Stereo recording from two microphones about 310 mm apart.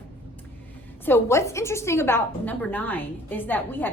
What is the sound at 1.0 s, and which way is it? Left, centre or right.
A woman's voice, centre.